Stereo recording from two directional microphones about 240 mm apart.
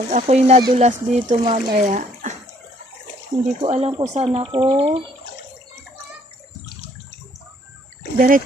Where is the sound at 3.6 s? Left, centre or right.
Right.